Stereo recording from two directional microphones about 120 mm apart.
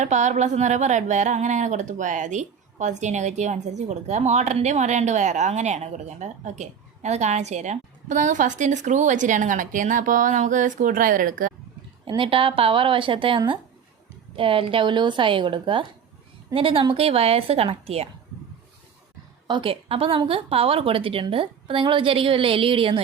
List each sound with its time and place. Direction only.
0.0 s speech: 75° right (ahead or behind)
12.0 s a woman's voice: 45° right (ahead or behind)
19.5 s a woman's voice: 45° right (ahead or behind)